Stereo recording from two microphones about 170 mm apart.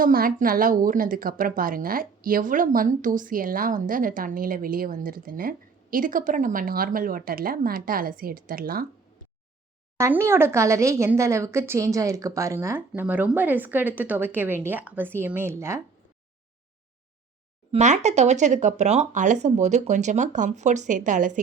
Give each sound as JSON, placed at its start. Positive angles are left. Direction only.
{"t": 0.0, "sound": "a woman's voice", "side_deg": -55}
{"t": 10.0, "sound": "a woman's voice", "side_deg": -15}
{"t": 17.7, "sound": "speech", "side_deg": -45}